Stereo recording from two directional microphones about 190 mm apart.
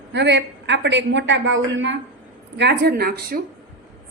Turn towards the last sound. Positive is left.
turn(degrees=-55)  # may be behind; listen again after turning